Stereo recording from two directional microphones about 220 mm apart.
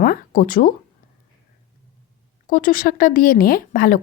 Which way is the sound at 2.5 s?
40° left (ahead or behind).